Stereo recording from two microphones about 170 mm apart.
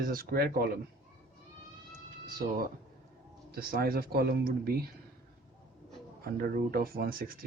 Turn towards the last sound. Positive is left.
turn(degrees=-60)  # may be behind; listen again after turning